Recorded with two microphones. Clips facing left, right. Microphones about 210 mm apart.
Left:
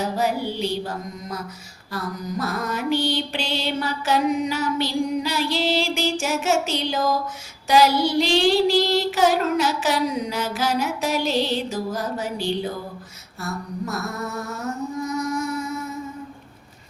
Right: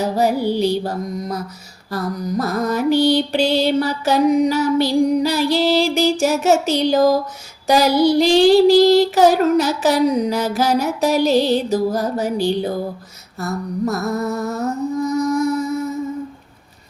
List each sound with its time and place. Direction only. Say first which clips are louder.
0.2 s child singing: right 9 dB; 40° right (ahead or behind)
2.4 s child singing: right 7 dB; 40° right (ahead or behind)
13.4 s music: right 8 dB; 40° right (ahead or behind)